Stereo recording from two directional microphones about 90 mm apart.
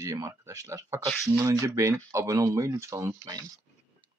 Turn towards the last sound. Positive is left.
turn(degrees=-35)  # may be behind; listen again after turning